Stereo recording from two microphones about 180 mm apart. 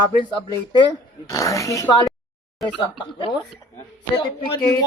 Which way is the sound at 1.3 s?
15° left (ahead or behind).